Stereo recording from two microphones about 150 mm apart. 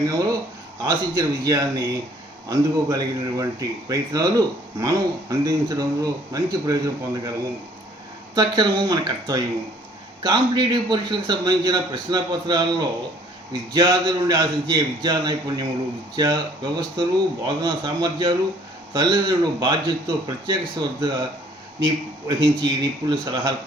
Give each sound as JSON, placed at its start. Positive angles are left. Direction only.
{"t": 0.0, "sound": "speech", "side_deg": -25}
{"t": 8.4, "sound": "speech", "side_deg": -30}